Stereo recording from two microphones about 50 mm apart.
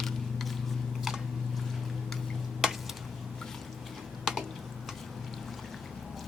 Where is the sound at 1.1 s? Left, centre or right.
Centre.